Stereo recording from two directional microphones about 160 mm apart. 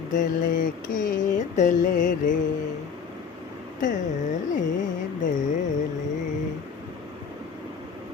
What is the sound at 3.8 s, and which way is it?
Mantra, 50° left (ahead or behind).